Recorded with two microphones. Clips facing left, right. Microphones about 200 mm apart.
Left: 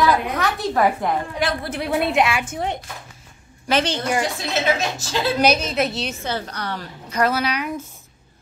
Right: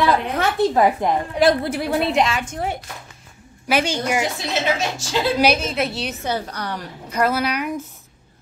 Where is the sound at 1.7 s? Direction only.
Centre (ahead or behind).